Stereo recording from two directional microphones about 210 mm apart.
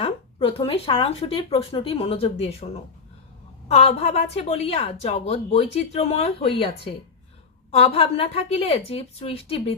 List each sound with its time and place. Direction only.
0.0 s a woman's voice: 25° left (ahead or behind)
3.7 s a woman's voice: 30° left (ahead or behind)